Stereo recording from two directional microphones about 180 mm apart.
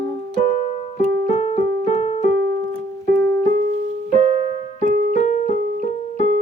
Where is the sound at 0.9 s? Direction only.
35° left (ahead or behind).